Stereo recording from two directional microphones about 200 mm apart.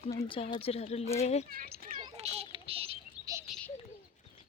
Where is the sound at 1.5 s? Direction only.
50° right (ahead or behind).